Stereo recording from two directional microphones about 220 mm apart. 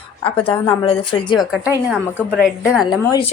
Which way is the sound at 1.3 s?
Centre (ahead or behind).